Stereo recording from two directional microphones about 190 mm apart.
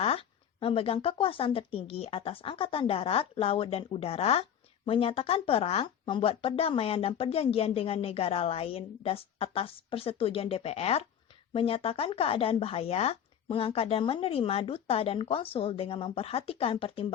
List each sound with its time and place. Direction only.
0.0 s speech: 30° left (ahead or behind)